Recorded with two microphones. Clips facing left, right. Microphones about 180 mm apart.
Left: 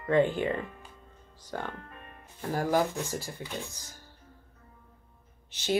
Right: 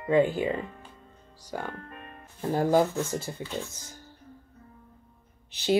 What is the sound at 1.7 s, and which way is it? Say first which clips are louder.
Music: right 3 dB; 55° right (ahead or behind).